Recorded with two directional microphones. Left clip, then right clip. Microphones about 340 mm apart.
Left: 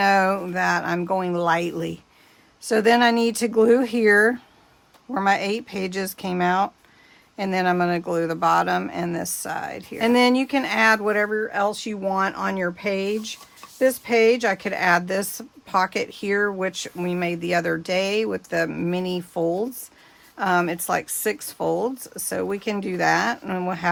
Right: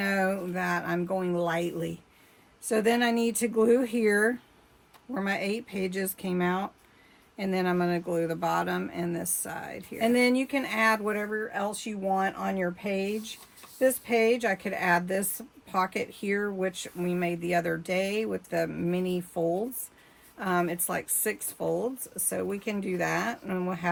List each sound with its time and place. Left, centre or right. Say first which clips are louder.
0.0 s speech: left 9 dB; centre